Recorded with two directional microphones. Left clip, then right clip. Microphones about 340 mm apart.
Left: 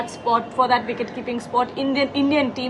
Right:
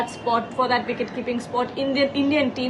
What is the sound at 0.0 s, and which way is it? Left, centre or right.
A woman's voice, centre.